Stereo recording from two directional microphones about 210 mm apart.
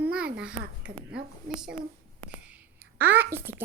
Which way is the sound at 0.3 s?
5° right (ahead or behind).